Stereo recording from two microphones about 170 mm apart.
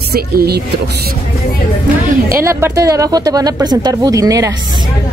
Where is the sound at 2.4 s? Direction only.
15° right (ahead or behind).